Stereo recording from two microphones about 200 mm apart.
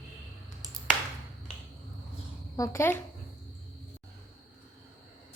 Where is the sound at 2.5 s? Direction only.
15° left (ahead or behind).